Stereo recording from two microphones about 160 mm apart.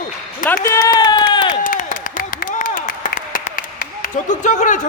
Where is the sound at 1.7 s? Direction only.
55° left (ahead or behind).